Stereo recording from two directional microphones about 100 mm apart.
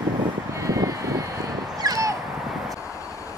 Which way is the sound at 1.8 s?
35° right (ahead or behind).